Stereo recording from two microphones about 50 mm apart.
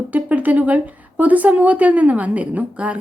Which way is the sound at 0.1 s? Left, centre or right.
Right.